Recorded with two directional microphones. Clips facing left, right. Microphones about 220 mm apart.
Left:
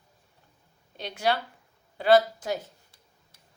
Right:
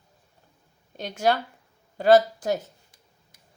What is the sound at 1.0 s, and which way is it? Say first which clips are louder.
A woman's voice: right 4 dB; 45° right (ahead or behind).